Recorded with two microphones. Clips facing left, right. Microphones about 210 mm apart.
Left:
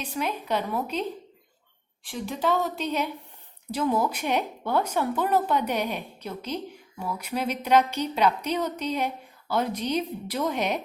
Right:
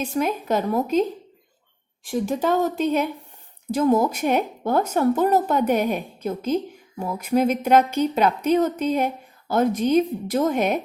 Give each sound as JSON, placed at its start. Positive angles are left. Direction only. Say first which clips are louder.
{"t": 0.0, "sound": "a woman's voice", "louder": "right 7 dB", "side_deg": -45}
{"t": 2.0, "sound": "a woman's voice", "louder": "right 5 dB", "side_deg": -45}